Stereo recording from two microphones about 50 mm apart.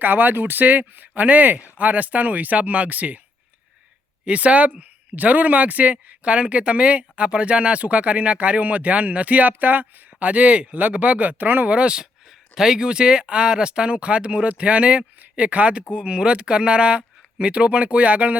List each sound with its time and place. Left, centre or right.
0.0 s speech: right
4.3 s speech: right
11.7 s speech: centre